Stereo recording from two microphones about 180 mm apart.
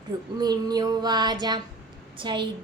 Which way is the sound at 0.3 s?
20° right (ahead or behind).